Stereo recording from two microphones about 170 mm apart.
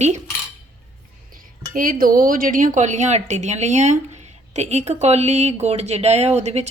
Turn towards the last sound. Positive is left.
turn(degrees=-40)  # may be behind; listen again after turning